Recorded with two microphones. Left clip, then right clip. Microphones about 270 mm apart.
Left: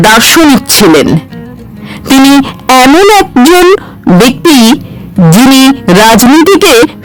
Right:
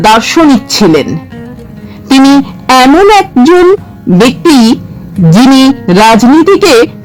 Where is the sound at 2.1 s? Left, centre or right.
Left.